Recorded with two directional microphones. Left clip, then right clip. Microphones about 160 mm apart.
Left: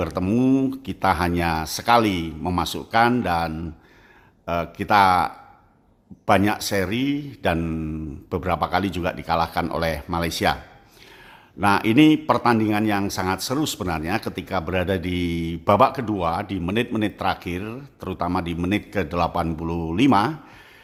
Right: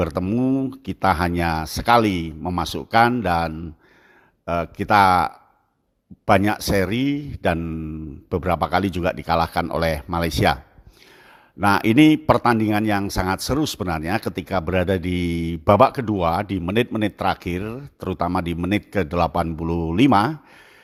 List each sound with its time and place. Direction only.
0.0 s a man's voice: 35° right (ahead or behind)
0.3 s speech: 20° right (ahead or behind)
0.7 s a man's voice: 35° right (ahead or behind)
7.6 s speech: 20° right (ahead or behind)
8.3 s a man's voice: 35° right (ahead or behind)
11.6 s a man's voice: 40° right (ahead or behind)